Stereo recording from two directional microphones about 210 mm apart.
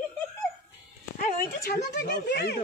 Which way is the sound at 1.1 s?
45° left (ahead or behind).